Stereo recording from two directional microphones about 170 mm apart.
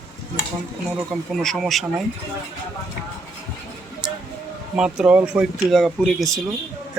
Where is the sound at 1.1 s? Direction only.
Centre (ahead or behind).